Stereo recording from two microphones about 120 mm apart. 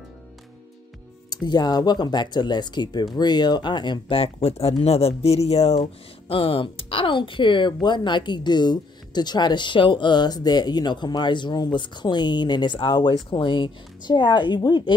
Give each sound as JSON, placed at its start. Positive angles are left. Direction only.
{"t": 1.3, "sound": "speech", "side_deg": 35}
{"t": 6.2, "sound": "speech", "side_deg": 50}